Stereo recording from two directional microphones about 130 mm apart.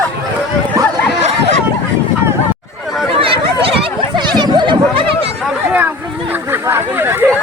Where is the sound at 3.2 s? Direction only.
45° right (ahead or behind).